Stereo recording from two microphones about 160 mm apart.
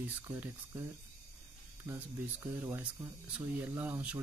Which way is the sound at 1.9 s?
15° right (ahead or behind).